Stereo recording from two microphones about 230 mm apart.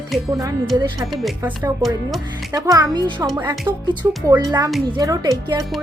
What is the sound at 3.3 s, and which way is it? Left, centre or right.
A woman's voice, centre.